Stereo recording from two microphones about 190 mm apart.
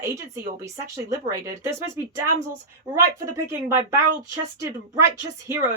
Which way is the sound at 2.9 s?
15° right (ahead or behind).